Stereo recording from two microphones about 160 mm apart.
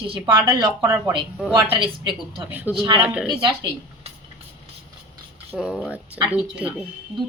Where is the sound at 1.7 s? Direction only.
30° right (ahead or behind).